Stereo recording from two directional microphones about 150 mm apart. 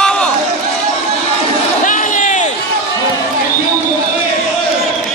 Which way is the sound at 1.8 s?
60° left (ahead or behind).